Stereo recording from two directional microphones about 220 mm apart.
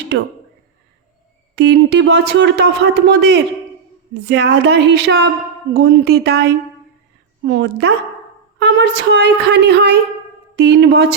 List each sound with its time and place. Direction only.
1.5 s speech: 50° right (ahead or behind)